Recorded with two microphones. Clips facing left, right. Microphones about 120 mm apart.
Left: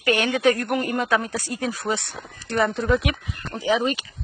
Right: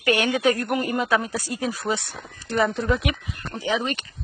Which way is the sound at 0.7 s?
5° right (ahead or behind).